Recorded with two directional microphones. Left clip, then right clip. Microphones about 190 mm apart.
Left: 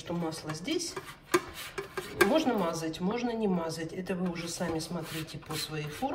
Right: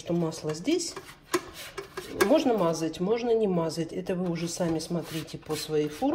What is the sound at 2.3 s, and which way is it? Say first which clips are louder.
Speech: right 4 dB; 25° right (ahead or behind).